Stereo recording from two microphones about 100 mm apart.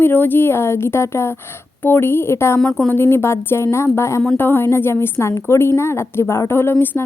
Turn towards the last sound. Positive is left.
turn(degrees=20)  # may be behind; listen again after turning